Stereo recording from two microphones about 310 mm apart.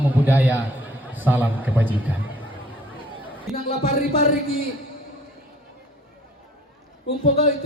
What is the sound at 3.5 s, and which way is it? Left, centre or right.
Speech, left.